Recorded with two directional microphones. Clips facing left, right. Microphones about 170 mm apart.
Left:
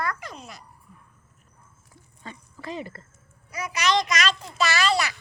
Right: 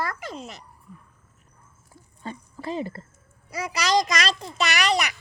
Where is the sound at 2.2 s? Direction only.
35° right (ahead or behind).